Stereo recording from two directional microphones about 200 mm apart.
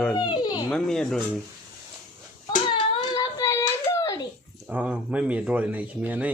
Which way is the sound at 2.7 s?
20° left (ahead or behind).